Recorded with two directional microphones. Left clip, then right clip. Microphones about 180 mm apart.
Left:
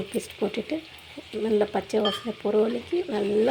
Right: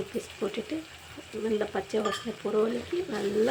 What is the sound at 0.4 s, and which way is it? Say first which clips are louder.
Speech: left 4 dB; 25° left (ahead or behind).